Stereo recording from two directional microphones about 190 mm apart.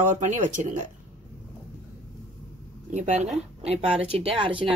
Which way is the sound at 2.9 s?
35° right (ahead or behind).